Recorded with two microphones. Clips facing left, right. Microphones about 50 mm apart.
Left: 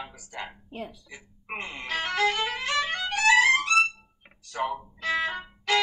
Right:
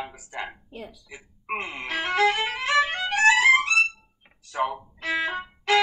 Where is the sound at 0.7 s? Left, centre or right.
Left.